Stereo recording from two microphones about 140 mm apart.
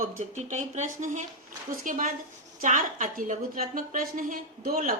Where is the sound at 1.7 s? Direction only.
75° right (ahead or behind).